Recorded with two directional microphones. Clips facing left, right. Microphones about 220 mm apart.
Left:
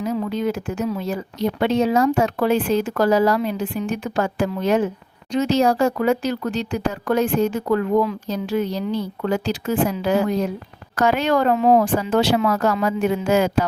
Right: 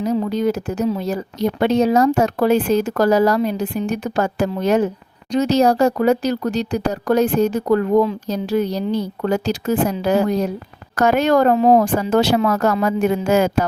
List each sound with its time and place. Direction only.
0.0 s speech: 40° right (ahead or behind)